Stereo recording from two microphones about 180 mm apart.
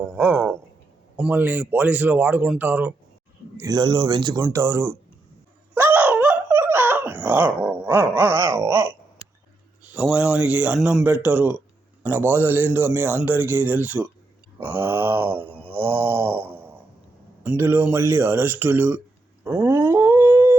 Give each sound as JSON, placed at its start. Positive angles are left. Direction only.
{"t": 0.0, "sound": "speech", "side_deg": -10}
{"t": 3.6, "sound": "speech", "side_deg": -25}
{"t": 5.7, "sound": "a sound", "side_deg": -10}
{"t": 9.9, "sound": "speech", "side_deg": -5}
{"t": 14.6, "sound": "a sound", "side_deg": -10}
{"t": 17.4, "sound": "speech", "side_deg": -10}
{"t": 19.5, "sound": "dog", "side_deg": -15}